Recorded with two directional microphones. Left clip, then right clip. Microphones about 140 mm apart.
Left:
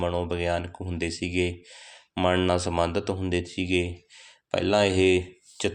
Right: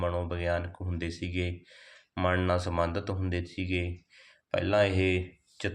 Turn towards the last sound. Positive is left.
turn(degrees=40)  # may be behind; listen again after turning